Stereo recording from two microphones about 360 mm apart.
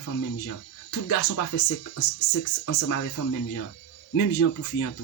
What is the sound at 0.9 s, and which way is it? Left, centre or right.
Speech, left.